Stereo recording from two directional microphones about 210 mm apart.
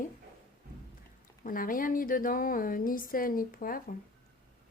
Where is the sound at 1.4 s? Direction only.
40° left (ahead or behind).